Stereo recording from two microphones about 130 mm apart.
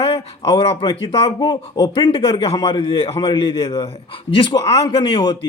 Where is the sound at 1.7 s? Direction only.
30° left (ahead or behind).